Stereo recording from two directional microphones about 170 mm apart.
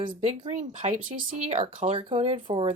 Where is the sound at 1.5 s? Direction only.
35° right (ahead or behind).